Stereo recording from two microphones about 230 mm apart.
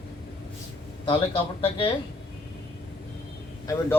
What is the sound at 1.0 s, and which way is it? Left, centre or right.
Speech, left.